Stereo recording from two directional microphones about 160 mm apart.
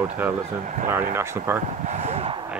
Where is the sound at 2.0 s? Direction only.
40° right (ahead or behind).